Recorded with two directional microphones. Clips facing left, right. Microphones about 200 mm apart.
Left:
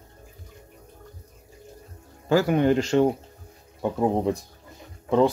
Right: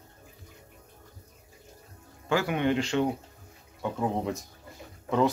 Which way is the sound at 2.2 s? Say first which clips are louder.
Left 6 dB; 40° left (ahead or behind).